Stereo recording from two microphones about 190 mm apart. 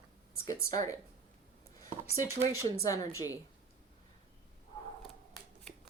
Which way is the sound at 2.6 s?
15° left (ahead or behind).